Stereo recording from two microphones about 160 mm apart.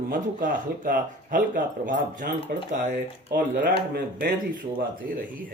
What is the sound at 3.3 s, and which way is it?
Speech, 65° right (ahead or behind).